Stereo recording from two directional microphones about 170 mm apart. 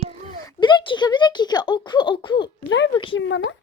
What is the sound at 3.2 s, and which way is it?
Speech, 90° left.